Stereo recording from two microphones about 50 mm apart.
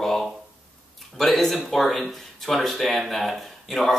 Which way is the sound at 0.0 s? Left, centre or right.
Centre.